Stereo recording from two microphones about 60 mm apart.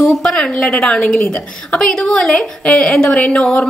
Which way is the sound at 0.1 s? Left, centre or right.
Centre.